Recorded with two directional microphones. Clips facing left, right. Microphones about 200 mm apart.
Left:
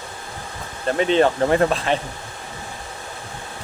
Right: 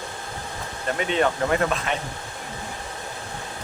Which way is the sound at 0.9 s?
30° left (ahead or behind).